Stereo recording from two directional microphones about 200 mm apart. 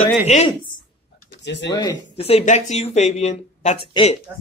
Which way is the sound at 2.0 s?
30° left (ahead or behind).